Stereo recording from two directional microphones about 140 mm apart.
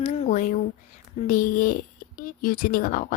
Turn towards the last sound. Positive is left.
turn(degrees=85)